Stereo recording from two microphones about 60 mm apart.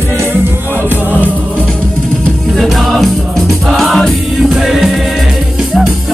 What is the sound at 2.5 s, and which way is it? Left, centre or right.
Music, centre.